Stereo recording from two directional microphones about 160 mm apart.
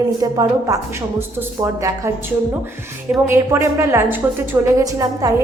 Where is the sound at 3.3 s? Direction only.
15° right (ahead or behind).